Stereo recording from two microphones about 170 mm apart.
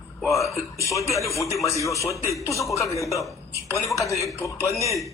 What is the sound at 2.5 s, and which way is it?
Speech, 20° left (ahead or behind).